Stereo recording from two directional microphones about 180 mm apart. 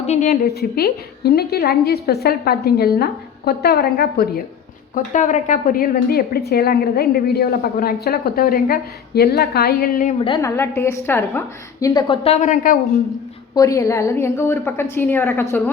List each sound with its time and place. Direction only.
0.0 s a woman's voice: 40° left (ahead or behind)
0.4 s a woman's voice: 60° left (ahead or behind)
4.9 s a woman's voice: 40° left (ahead or behind)
10.2 s a woman's voice: 30° left (ahead or behind)
10.4 s a woman's voice: 15° left (ahead or behind); by 12.7 s 40° left (ahead or behind)
13.5 s a woman's voice: 20° left (ahead or behind)